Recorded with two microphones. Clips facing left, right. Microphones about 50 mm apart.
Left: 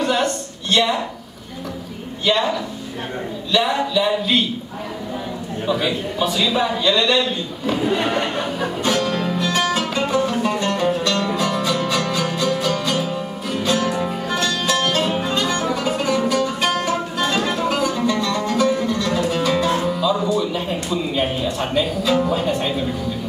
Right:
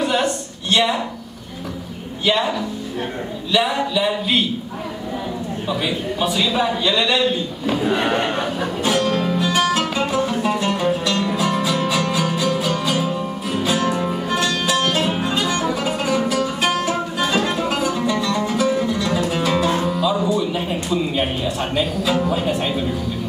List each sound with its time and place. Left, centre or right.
0.0 s a sound: centre
2.2 s speech: centre
3.5 s a man's voice: centre
5.7 s a man's voice: centre
7.9 s speech: centre
8.5 s music: centre